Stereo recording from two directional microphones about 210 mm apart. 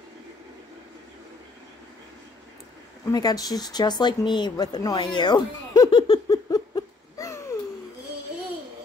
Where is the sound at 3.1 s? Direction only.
20° left (ahead or behind).